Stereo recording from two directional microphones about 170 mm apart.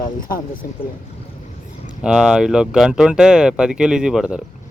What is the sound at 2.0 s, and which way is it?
Speech, 5° right (ahead or behind).